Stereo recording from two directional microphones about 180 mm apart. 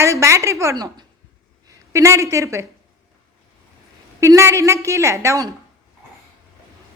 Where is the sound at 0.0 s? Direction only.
15° right (ahead or behind).